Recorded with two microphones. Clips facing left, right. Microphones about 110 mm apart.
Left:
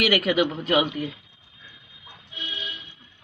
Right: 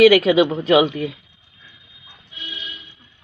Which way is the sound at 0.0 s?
90° right.